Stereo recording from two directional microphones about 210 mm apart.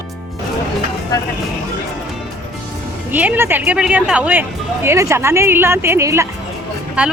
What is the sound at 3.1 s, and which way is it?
Speech, 10° right (ahead or behind).